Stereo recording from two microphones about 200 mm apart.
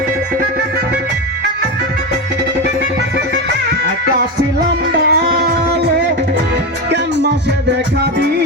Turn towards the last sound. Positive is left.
turn(degrees=-55)  # may be behind; listen again after turning